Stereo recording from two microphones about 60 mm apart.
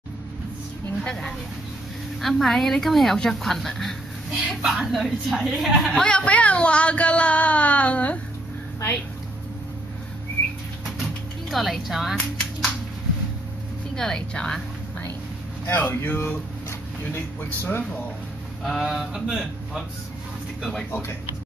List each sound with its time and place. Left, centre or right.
1.0 s a woman's voice: centre
5.9 s speech: centre
11.5 s a woman's voice: centre
12.2 s speech: centre
13.9 s speech: centre
15.6 s speech: left
18.6 s a sound: centre
18.9 s speech: centre